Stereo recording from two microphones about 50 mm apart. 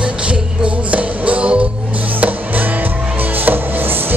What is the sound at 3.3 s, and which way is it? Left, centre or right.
Music, right.